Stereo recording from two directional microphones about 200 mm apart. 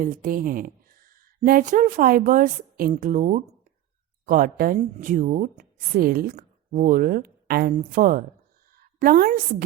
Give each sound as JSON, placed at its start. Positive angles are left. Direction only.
{"t": 0.0, "sound": "a woman's voice", "side_deg": -40}